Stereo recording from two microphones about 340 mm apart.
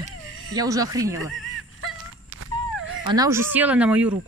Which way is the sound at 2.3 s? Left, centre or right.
Right.